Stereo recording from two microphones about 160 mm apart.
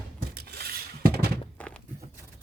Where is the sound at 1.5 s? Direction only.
5° left (ahead or behind).